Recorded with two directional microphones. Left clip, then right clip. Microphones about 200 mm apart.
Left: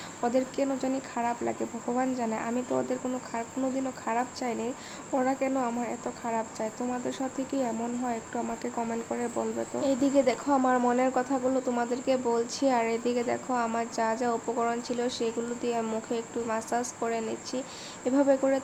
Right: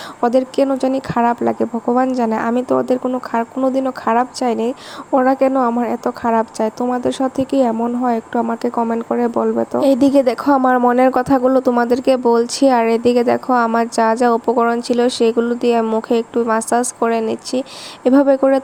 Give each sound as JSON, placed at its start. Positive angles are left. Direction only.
{"t": 0.2, "sound": "speech", "side_deg": -40}